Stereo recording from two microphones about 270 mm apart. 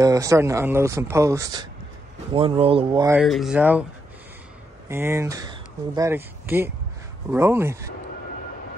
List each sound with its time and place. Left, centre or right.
0.0 s speech: centre
3.2 s speech: centre
4.8 s speech: centre